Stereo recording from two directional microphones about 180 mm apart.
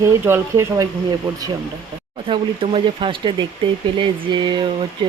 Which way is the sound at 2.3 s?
30° right (ahead or behind).